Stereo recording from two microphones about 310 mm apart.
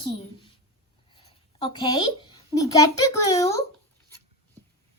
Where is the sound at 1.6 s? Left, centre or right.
Centre.